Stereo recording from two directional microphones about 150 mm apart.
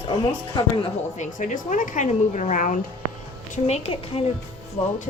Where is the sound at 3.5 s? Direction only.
45° left (ahead or behind).